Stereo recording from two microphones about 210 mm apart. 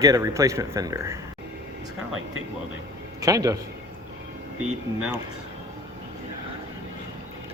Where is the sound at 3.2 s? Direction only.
15° right (ahead or behind).